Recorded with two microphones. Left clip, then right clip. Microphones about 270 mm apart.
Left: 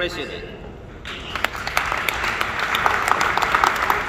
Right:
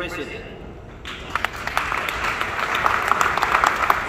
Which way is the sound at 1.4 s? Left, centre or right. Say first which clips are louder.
Left 3 dB; left.